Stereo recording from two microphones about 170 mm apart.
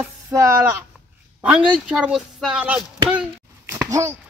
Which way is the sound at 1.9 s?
5° right (ahead or behind).